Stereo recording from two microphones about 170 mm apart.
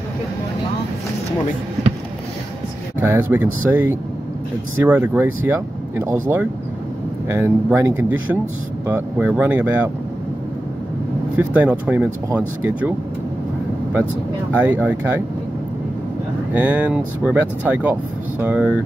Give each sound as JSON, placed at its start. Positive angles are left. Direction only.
{"t": 3.1, "sound": "speech", "side_deg": -10}
{"t": 11.3, "sound": "speech", "side_deg": -10}
{"t": 14.5, "sound": "speech", "side_deg": -10}
{"t": 16.5, "sound": "speech", "side_deg": -10}